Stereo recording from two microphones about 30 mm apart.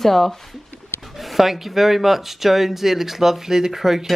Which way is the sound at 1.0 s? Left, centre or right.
Centre.